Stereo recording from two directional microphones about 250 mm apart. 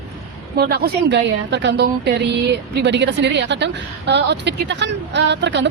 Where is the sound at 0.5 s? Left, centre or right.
Right.